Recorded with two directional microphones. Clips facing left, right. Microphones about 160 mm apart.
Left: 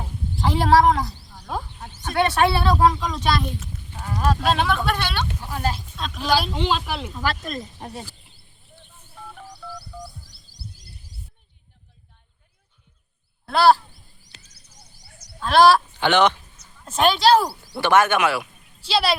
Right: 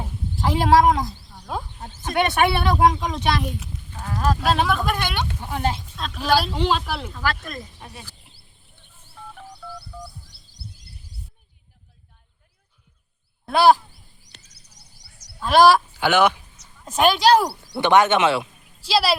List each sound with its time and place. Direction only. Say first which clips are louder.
0.0 s a sound: even; 5° right (ahead or behind)
1.3 s a sound: even; centre (ahead or behind)
1.9 s speech: even; 20° right (ahead or behind)
4.0 s speech: even; centre (ahead or behind); by 5.8 s 20° right (ahead or behind)
6.0 s speech: right 1 dB; 5° right (ahead or behind)
7.1 s speech: left 1 dB; 20° left (ahead or behind)
7.8 s speech: left 6 dB; 40° left (ahead or behind)
13.4 s a sound: right 1 dB; 15° right (ahead or behind)
14.4 s fowl: left 2 dB; 75° right (ahead or behind)
15.4 s speech: even; 10° right (ahead or behind)
18.9 s speech: right 1 dB; 5° right (ahead or behind)